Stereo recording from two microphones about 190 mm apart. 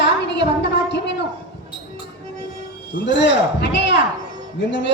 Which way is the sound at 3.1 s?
70° left (ahead or behind).